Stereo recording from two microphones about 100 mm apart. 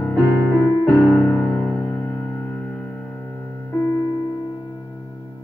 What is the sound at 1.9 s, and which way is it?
Music, 20° left (ahead or behind).